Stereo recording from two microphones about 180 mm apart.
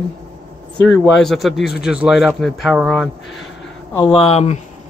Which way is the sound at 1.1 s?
Centre (ahead or behind).